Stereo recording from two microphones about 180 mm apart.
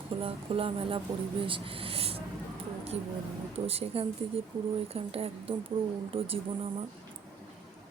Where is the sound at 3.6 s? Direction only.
35° right (ahead or behind).